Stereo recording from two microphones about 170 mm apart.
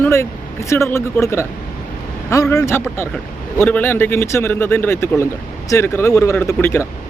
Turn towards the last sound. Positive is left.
turn(degrees=15)  # may be behind; listen again after turning